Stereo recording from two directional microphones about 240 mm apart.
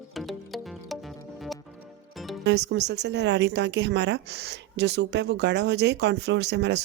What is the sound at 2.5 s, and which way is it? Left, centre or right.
Speech, right.